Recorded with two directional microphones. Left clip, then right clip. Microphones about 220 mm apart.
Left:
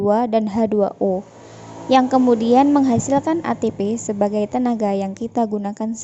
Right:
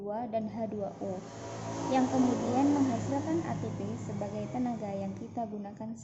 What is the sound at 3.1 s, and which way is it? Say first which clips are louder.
A woman's voice: left 14 dB; 45° left (ahead or behind).